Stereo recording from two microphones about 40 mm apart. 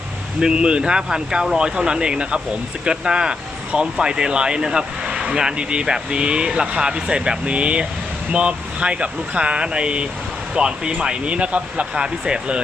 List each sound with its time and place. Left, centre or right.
0.3 s speech: right